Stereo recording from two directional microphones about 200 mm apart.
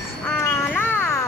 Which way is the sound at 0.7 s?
10° left (ahead or behind).